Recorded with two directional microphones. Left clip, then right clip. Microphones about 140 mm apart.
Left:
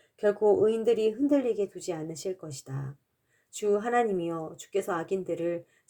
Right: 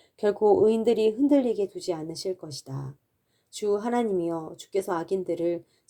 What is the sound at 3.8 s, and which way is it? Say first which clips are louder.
Speech: left 1 dB; 50° right (ahead or behind).